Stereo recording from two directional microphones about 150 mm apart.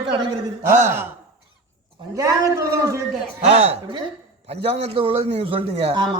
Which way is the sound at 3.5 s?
40° right (ahead or behind).